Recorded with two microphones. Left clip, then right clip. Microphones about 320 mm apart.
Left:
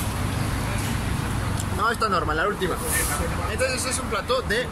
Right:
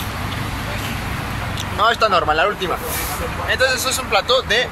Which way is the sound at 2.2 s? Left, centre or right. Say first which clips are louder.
Right 8 dB; right.